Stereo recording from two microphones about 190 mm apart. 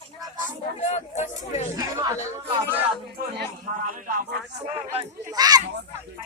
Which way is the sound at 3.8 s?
45° right (ahead or behind).